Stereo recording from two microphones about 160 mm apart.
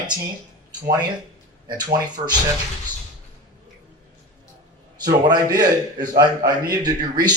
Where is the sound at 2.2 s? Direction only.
40° right (ahead or behind).